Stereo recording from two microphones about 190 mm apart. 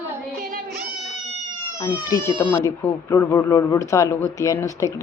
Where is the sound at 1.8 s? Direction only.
20° left (ahead or behind).